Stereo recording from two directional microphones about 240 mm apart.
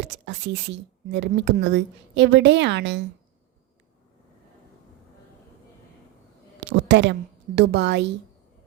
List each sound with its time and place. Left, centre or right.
0.0 s a woman's voice: right
6.7 s a woman's voice: right